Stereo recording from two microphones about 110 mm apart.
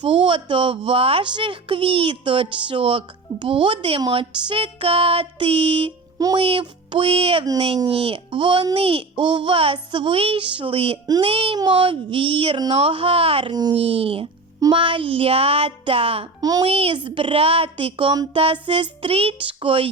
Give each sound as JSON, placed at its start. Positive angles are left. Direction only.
{"t": 0.0, "sound": "a woman's voice", "side_deg": -50}
{"t": 4.1, "sound": "music", "side_deg": -55}
{"t": 6.3, "sound": "music", "side_deg": -55}
{"t": 7.9, "sound": "a woman's voice", "side_deg": -60}
{"t": 9.7, "sound": "music", "side_deg": -50}
{"t": 11.0, "sound": "a child's voice", "side_deg": -35}
{"t": 11.3, "sound": "music", "side_deg": -60}
{"t": 11.5, "sound": "a woman's voice", "side_deg": -45}
{"t": 12.7, "sound": "music", "side_deg": -55}
{"t": 13.7, "sound": "music", "side_deg": -60}
{"t": 16.4, "sound": "a child's voice", "side_deg": -35}
{"t": 16.6, "sound": "a woman's voice", "side_deg": -60}